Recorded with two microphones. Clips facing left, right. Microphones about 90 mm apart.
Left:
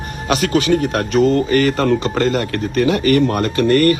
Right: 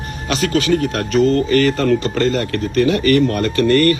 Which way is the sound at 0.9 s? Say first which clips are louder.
Left 1 dB; 45° left (ahead or behind).